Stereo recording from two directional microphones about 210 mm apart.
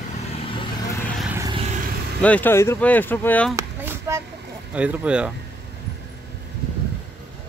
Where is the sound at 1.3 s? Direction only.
15° right (ahead or behind).